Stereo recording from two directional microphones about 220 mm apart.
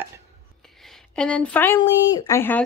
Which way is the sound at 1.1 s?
5° left (ahead or behind).